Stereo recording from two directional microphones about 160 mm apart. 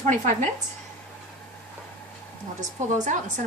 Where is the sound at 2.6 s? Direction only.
50° right (ahead or behind).